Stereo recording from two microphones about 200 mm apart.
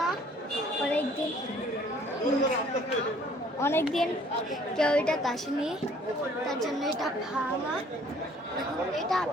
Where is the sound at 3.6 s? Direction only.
10° left (ahead or behind).